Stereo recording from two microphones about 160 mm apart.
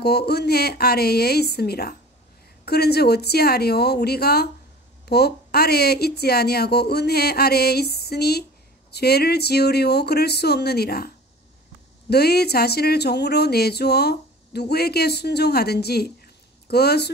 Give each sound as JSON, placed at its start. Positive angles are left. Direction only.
{"t": 0.0, "sound": "speech", "side_deg": 90}
{"t": 12.1, "sound": "speech", "side_deg": 85}